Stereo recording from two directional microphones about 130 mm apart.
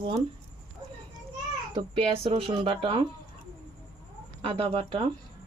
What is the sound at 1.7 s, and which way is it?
Speech, 45° right (ahead or behind).